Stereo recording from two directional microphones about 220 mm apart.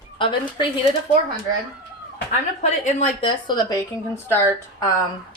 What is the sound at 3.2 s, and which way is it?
A woman's voice, 20° left (ahead or behind).